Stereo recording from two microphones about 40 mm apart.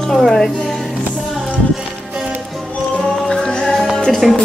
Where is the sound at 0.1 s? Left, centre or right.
Centre.